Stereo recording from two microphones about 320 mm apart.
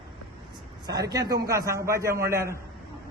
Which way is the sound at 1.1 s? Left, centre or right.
Centre.